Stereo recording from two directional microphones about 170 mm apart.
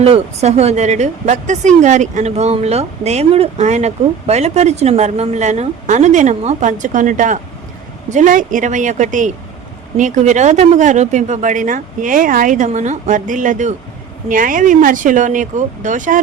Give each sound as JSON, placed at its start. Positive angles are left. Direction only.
{"t": 0.0, "sound": "a woman's voice", "side_deg": -40}